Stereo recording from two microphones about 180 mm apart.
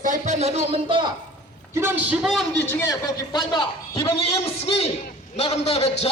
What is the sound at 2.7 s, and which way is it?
A man's voice, 15° left (ahead or behind).